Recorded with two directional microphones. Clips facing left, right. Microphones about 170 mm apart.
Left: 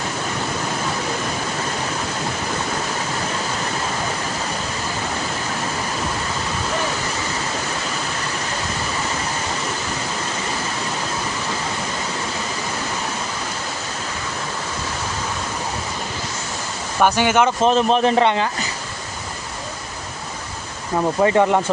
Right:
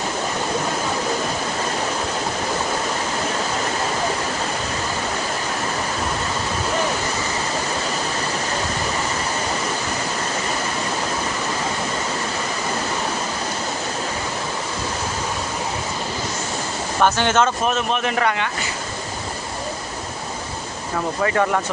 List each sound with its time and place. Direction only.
17.0 s speech: 10° left (ahead or behind)
17.6 s a man's voice: 30° left (ahead or behind)
21.2 s speech: 20° left (ahead or behind)